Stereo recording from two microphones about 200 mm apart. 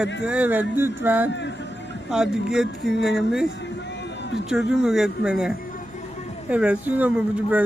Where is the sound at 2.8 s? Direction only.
55° left (ahead or behind).